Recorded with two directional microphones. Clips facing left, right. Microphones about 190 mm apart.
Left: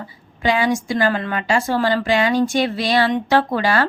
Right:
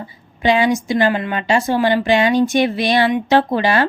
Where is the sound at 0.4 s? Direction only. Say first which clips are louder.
Right 3 dB; 20° right (ahead or behind).